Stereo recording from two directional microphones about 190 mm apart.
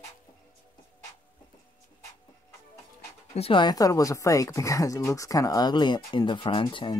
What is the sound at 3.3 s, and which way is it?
Speech, 30° left (ahead or behind).